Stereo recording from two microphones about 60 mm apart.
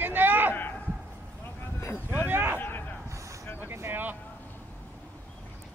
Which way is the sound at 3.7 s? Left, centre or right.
Right.